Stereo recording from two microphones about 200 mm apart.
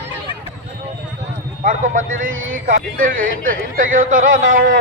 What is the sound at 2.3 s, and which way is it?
Speech, 80° right.